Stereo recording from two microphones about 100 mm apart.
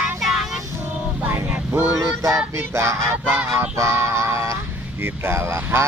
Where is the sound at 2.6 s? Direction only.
30° right (ahead or behind).